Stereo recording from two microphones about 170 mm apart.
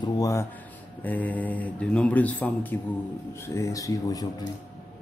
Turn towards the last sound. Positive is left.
turn(degrees=20)  # may be behind; listen again after turning